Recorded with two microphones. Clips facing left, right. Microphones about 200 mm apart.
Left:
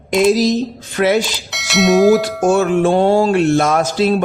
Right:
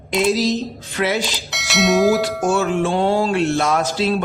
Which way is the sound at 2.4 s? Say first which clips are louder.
Left 5 dB; 55° left (ahead or behind).